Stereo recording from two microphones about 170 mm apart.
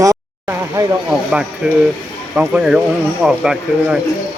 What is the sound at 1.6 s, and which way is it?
Speech, 5° right (ahead or behind).